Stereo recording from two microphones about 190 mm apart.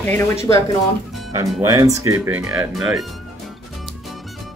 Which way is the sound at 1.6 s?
20° right (ahead or behind).